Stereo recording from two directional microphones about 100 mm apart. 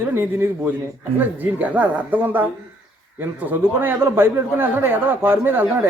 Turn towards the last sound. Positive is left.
turn(degrees=-20)  # may be behind; listen again after turning